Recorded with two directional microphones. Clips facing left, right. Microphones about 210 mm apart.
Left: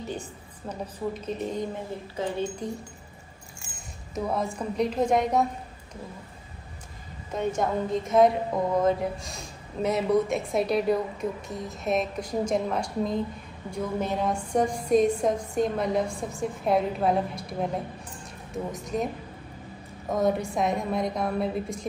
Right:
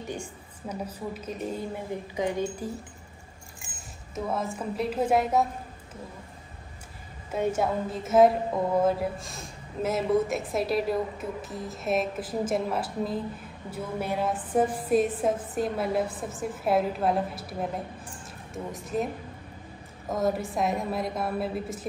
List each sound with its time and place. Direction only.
0.1 s a woman's voice: 10° right (ahead or behind)
2.1 s a woman's voice: 15° right (ahead or behind)
3.7 s a woman's voice: centre (ahead or behind)
7.2 s a woman's voice: 5° right (ahead or behind)
18.7 s a woman's voice: centre (ahead or behind)
20.1 s a woman's voice: centre (ahead or behind)